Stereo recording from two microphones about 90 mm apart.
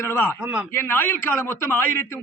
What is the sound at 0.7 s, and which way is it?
A man's voice, 25° left (ahead or behind).